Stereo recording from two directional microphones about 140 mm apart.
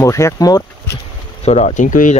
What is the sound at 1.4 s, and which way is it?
Speech, 55° left (ahead or behind).